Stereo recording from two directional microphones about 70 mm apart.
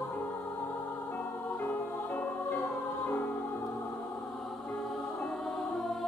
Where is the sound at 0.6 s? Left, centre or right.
Left.